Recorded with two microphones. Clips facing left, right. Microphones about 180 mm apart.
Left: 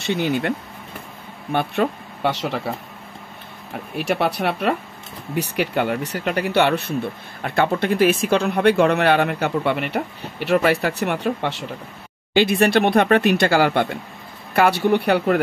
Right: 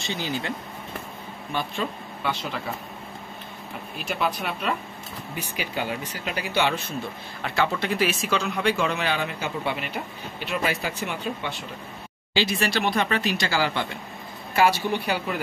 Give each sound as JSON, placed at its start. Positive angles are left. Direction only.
{"t": 0.0, "sound": "speech", "side_deg": 65}
{"t": 3.9, "sound": "speech", "side_deg": 70}
{"t": 12.4, "sound": "speech", "side_deg": 55}